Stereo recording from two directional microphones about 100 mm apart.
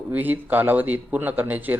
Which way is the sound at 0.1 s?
20° right (ahead or behind).